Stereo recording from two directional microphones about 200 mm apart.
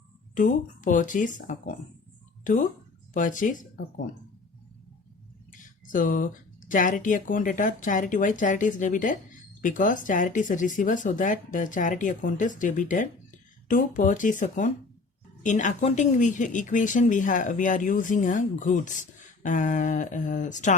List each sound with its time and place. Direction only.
0.3 s speech: 40° left (ahead or behind)
5.5 s speech: 40° left (ahead or behind)